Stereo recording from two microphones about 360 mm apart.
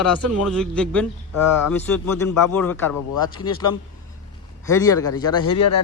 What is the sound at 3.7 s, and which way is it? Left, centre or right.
Speech, left.